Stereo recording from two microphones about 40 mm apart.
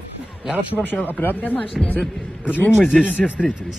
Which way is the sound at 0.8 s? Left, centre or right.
Left.